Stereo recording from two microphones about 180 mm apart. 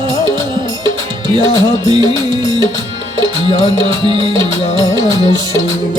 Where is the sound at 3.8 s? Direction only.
25° right (ahead or behind).